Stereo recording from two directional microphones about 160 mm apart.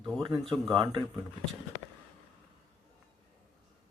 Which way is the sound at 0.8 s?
30° right (ahead or behind).